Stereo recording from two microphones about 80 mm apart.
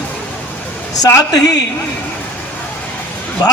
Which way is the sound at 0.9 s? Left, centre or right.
Left.